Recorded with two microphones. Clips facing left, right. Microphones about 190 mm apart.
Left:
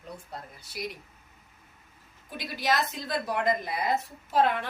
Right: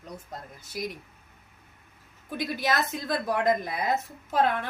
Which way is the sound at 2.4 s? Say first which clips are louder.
Right 1 dB; 50° right (ahead or behind).